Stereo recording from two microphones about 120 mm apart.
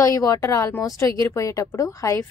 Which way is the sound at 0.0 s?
30° left (ahead or behind).